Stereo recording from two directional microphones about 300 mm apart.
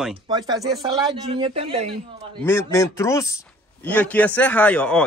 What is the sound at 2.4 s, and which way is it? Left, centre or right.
Speech, centre.